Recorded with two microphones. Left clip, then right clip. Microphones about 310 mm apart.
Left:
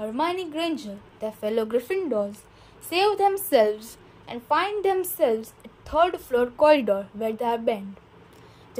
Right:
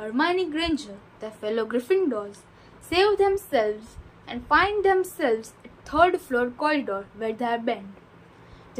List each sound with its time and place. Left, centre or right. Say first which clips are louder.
0.0 s a woman's voice: right 2 dB; left